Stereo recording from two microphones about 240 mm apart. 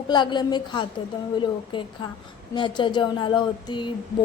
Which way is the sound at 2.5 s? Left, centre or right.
Centre.